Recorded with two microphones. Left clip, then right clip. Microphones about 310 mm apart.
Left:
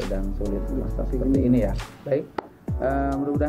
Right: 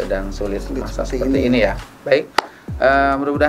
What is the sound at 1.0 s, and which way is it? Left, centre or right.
Chopping, centre.